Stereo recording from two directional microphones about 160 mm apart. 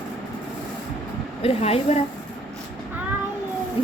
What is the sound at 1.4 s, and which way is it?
Speech, 40° left (ahead or behind).